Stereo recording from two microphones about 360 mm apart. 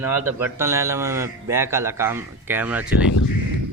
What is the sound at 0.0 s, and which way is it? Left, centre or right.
A man's voice, centre.